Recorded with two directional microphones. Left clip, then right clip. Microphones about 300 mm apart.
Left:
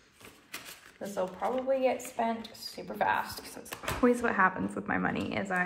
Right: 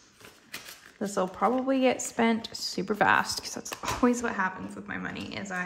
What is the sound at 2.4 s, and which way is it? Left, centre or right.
Speech, right.